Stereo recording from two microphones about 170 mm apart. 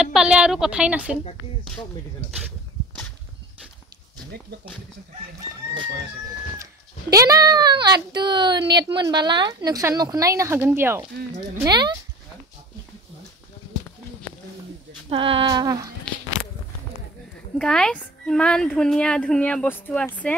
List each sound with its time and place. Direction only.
0.0 s speech: 5° right (ahead or behind)
7.1 s speech: 20° right (ahead or behind)
15.0 s speech: 30° right (ahead or behind)
17.6 s speech: 5° left (ahead or behind)